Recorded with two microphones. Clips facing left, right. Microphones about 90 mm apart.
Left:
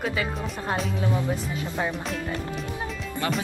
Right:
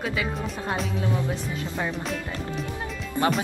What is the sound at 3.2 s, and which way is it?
Speech, 20° right (ahead or behind).